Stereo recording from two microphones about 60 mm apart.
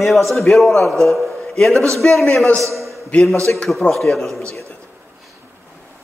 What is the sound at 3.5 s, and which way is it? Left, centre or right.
Speech, left.